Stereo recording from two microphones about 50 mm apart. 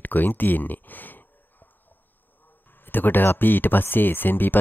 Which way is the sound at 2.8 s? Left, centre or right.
Left.